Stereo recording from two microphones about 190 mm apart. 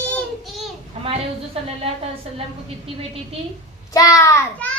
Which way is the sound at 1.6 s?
30° right (ahead or behind).